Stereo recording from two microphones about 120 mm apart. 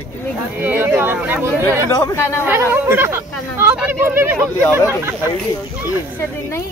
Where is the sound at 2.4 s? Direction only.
15° right (ahead or behind).